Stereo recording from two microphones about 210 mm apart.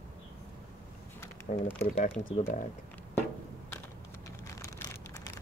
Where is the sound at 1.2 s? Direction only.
10° left (ahead or behind).